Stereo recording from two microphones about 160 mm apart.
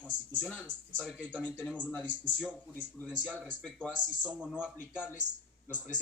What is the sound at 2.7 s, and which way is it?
Speech, 10° left (ahead or behind).